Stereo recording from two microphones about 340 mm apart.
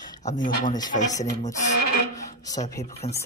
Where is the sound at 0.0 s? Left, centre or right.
Centre.